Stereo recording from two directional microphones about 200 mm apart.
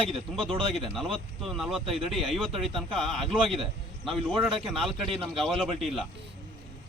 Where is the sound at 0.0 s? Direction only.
25° right (ahead or behind).